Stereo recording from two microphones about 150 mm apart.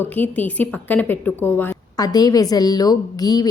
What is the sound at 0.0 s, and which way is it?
Speech, 10° left (ahead or behind).